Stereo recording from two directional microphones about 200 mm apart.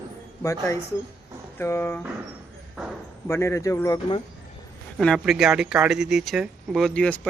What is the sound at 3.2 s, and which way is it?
Speech, 15° left (ahead or behind).